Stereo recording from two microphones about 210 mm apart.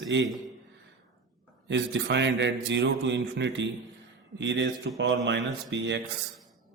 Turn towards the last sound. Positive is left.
turn(degrees=-55)  # may be behind; listen again after turning